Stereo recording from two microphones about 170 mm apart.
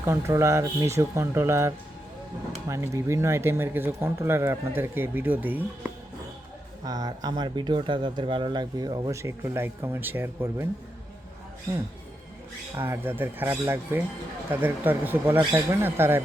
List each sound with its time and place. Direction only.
0.0 s speech: 15° right (ahead or behind)
6.8 s speech: 20° right (ahead or behind)
12.7 s speech: 15° right (ahead or behind)